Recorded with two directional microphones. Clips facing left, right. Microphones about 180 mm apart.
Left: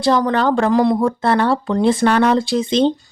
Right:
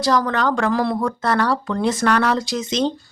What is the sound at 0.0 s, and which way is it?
Speech, 25° left (ahead or behind).